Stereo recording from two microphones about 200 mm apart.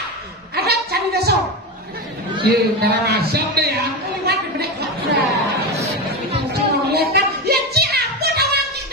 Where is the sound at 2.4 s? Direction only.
50° right (ahead or behind).